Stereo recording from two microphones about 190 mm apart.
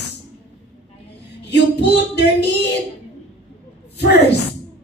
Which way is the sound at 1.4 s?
65° left (ahead or behind).